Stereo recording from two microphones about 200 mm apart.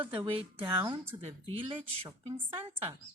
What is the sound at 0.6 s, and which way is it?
Speech, 10° right (ahead or behind).